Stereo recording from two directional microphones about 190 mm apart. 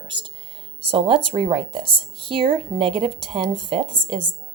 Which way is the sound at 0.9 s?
25° right (ahead or behind).